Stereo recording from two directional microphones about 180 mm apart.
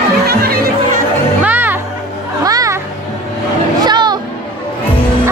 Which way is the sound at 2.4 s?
20° right (ahead or behind).